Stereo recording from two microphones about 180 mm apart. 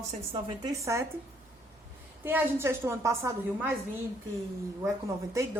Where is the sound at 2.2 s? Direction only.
10° right (ahead or behind).